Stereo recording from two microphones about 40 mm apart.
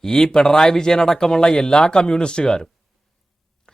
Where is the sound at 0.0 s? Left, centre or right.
Centre.